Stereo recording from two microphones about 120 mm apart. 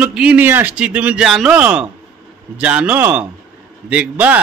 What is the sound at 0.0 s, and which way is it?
A man's voice, 10° right (ahead or behind).